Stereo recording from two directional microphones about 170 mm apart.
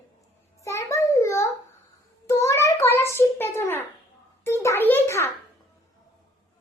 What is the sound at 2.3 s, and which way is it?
Child singing, 15° left (ahead or behind).